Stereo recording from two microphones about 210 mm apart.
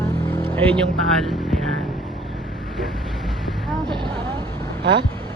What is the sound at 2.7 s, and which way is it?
Vehicle, centre (ahead or behind).